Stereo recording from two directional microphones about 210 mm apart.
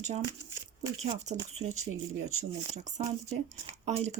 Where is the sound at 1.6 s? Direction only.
80° right.